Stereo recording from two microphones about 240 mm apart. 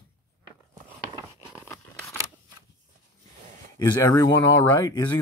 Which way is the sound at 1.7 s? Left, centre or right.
Centre.